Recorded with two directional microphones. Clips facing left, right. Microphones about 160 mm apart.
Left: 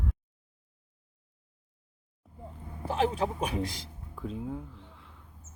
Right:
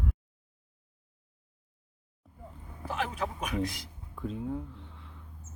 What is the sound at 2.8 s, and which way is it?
Speech, 30° left (ahead or behind).